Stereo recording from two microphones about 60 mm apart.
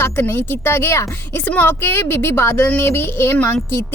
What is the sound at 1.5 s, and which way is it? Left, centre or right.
Speech, left.